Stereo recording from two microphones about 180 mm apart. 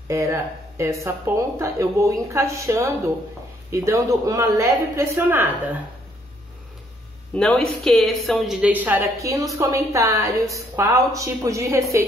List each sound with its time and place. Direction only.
0.1 s a woman's voice: 15° right (ahead or behind)
7.3 s a woman's voice: 5° left (ahead or behind); by 11.8 s 15° right (ahead or behind)